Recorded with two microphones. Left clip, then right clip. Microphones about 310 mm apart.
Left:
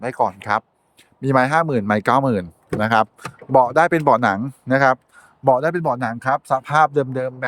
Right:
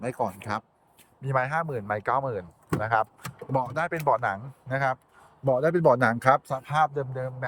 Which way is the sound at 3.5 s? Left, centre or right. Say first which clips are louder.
Left 14 dB; centre.